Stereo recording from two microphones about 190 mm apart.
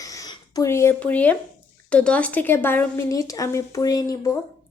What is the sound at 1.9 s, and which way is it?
A woman's voice, 5° left (ahead or behind).